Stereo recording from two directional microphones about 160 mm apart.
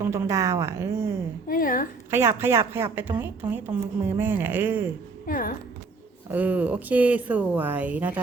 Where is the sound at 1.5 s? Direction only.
60° left (ahead or behind).